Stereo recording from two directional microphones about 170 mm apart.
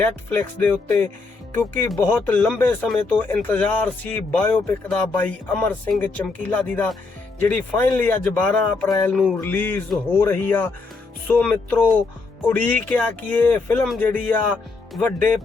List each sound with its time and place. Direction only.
0.0 s speech: 10° left (ahead or behind)